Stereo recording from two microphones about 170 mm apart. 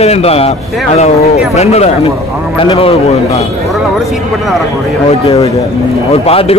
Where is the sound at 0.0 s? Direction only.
35° left (ahead or behind).